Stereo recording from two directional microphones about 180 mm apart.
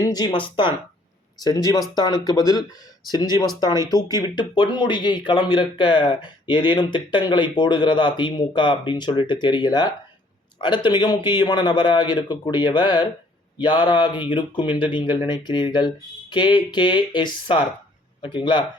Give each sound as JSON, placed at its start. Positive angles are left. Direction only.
{"t": 0.0, "sound": "speech", "side_deg": 20}